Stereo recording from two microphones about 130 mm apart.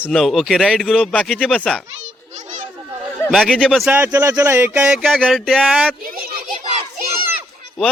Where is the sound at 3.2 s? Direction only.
Centre (ahead or behind).